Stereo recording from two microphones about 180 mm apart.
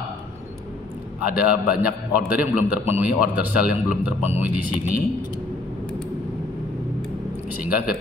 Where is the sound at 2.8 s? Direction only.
10° right (ahead or behind).